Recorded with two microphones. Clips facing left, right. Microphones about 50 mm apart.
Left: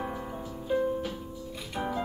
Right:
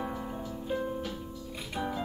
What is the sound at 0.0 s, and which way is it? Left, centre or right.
Music, centre.